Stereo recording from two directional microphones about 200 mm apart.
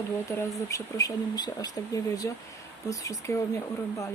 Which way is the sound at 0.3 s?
15° left (ahead or behind).